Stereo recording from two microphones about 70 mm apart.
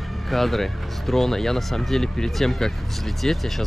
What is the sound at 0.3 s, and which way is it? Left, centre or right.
Speech, centre.